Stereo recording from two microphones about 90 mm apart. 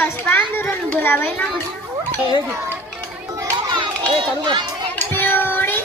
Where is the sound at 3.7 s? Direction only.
60° right (ahead or behind).